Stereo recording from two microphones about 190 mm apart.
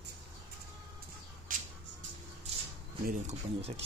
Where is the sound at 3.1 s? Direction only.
40° right (ahead or behind).